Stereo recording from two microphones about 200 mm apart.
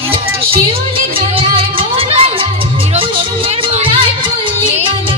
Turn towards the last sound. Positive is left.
turn(degrees=-30)  # may be behind; listen again after turning